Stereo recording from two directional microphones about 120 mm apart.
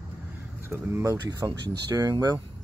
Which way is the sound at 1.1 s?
35° right (ahead or behind).